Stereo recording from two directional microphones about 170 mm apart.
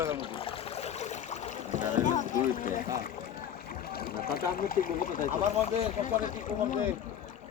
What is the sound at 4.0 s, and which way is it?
Speech, 60° left (ahead or behind).